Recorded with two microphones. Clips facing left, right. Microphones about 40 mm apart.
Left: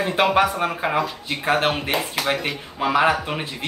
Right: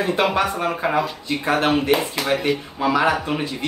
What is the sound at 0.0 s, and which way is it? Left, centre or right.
Speech, centre.